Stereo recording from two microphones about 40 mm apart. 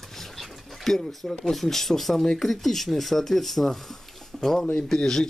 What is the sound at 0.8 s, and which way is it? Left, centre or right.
Speech, centre.